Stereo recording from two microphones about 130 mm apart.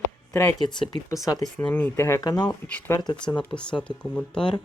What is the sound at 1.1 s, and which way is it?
Speech, 25° left (ahead or behind).